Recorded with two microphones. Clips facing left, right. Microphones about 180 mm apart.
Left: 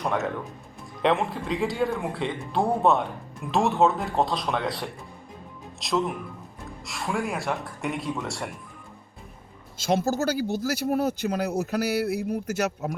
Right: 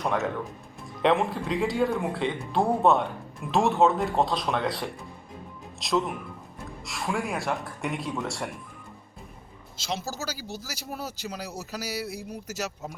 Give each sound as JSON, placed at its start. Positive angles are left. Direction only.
{"t": 1.0, "sound": "speech", "side_deg": 0}
{"t": 9.7, "sound": "speech", "side_deg": 50}